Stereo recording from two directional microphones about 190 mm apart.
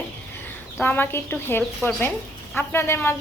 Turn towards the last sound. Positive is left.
turn(degrees=10)  # may be behind; listen again after turning